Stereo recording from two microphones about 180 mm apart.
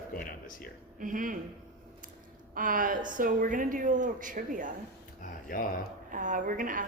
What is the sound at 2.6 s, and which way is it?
A woman's voice, 50° right (ahead or behind).